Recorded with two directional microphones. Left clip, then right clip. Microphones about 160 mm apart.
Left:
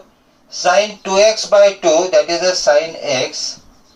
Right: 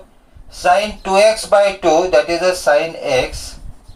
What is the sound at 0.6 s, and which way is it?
Speech, 10° right (ahead or behind).